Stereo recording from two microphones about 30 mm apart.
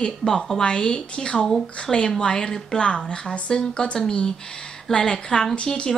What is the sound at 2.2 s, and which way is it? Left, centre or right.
Speech, left.